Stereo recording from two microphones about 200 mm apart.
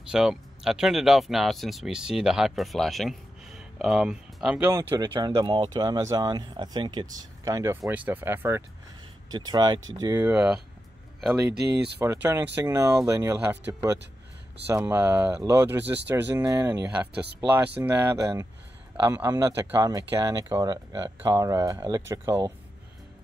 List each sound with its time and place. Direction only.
0.1 s speech: 5° right (ahead or behind)
12.0 s speech: 15° right (ahead or behind)